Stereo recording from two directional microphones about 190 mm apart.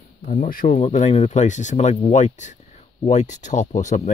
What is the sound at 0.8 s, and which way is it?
Speech, 35° left (ahead or behind).